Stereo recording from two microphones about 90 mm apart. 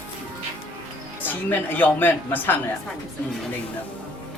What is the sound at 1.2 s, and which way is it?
Speech, 20° left (ahead or behind).